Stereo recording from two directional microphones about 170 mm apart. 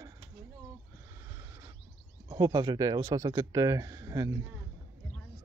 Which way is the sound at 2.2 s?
25° right (ahead or behind).